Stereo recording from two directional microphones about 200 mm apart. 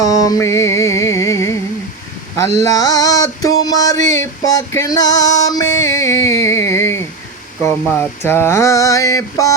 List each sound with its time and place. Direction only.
0.0 s music: 20° left (ahead or behind)
2.6 s male singing: 15° left (ahead or behind)